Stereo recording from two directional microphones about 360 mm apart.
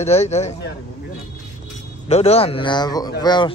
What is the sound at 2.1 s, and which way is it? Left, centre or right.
Speech, centre.